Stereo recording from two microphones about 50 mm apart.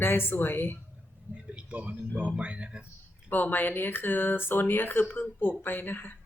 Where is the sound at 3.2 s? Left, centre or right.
Left.